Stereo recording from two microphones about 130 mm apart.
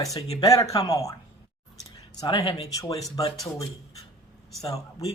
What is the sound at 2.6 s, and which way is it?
Speech, 25° left (ahead or behind).